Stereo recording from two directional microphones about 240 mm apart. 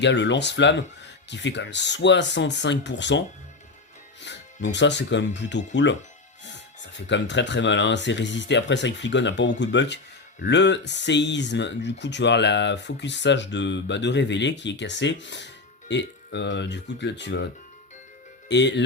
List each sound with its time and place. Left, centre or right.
0.0 s speech: left
4.3 s music: left
4.7 s speech: left
18.4 s speech: left